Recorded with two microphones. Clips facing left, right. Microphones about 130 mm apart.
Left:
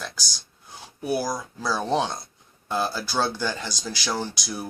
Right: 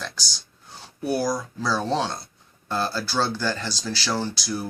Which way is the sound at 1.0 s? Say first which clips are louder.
Right 2 dB; 10° left (ahead or behind).